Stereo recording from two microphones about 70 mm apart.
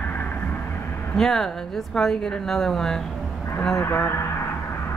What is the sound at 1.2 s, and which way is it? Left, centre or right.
A woman's voice, centre.